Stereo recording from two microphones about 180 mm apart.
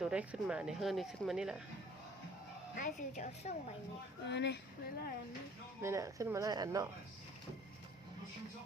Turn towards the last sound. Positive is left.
turn(degrees=-20)  # may be behind; listen again after turning